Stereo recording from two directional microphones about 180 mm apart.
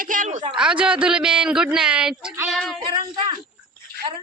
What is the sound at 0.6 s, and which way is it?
A woman's voice, 5° right (ahead or behind).